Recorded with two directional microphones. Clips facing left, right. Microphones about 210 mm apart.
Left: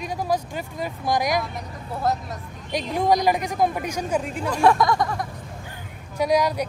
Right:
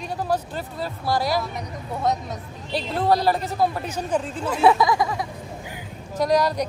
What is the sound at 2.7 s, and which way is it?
Speech, 15° left (ahead or behind).